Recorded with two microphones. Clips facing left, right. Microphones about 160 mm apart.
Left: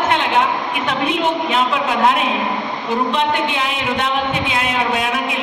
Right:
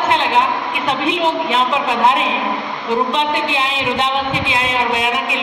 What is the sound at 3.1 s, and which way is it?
A woman's voice, 25° right (ahead or behind).